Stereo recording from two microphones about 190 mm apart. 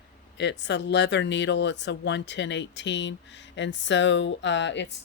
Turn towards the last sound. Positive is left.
turn(degrees=70)  # may be behind; listen again after turning